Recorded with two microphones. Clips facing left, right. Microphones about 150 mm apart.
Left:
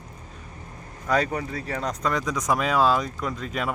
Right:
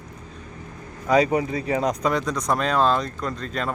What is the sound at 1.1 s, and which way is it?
Speech, 10° right (ahead or behind).